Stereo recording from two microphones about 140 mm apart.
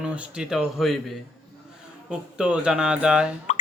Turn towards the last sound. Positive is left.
turn(degrees=60)  # may be behind; listen again after turning